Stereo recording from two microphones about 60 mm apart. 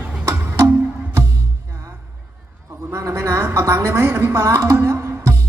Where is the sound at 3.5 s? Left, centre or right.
Right.